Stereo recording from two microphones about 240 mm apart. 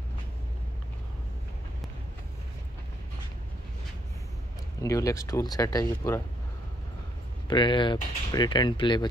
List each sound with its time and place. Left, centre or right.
4.8 s speech: centre
7.4 s speech: centre